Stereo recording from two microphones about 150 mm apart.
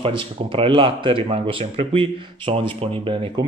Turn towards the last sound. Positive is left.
turn(degrees=-35)  # may be behind; listen again after turning